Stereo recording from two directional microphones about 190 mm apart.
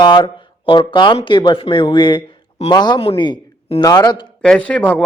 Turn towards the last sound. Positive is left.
turn(degrees=5)  # may be behind; listen again after turning